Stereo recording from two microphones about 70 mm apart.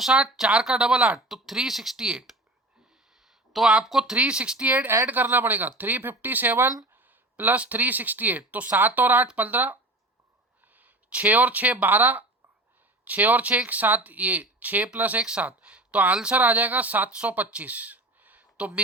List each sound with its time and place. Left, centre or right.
0.0 s speech: centre; by 9.7 s right
10.7 s a sound: right
11.8 s speech: right